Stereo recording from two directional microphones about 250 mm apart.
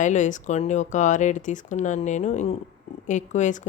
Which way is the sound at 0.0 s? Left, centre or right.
Left.